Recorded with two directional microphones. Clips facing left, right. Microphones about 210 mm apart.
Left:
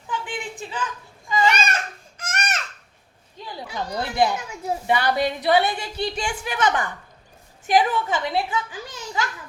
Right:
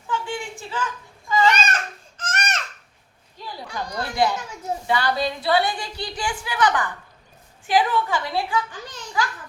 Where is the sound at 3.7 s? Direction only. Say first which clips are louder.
Left 2 dB; 20° left (ahead or behind).